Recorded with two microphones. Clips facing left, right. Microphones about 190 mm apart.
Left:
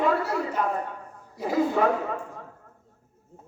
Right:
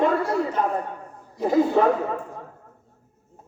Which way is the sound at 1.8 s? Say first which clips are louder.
Right 4 dB; 30° right (ahead or behind).